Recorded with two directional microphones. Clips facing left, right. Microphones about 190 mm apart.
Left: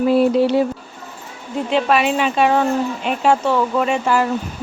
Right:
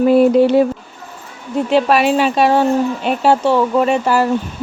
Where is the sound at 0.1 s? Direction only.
50° right (ahead or behind).